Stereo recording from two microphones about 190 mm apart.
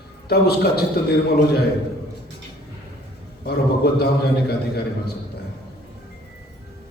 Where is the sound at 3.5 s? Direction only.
55° left (ahead or behind).